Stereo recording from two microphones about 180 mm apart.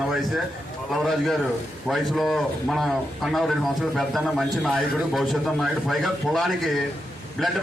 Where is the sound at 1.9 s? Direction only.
Centre (ahead or behind).